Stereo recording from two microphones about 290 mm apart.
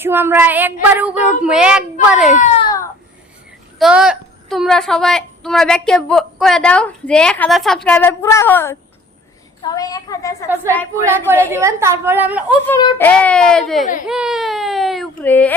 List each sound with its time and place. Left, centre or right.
0.0 s a woman's voice: centre
2.3 s a sound: left
3.8 s a woman's voice: centre
11.3 s a woman's voice: centre
12.6 s a woman's voice: centre